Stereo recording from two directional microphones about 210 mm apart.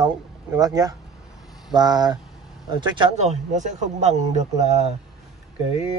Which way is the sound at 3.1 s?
35° right (ahead or behind).